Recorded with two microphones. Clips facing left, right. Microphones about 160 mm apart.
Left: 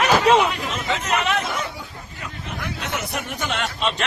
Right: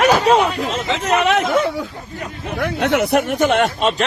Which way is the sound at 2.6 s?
60° right (ahead or behind).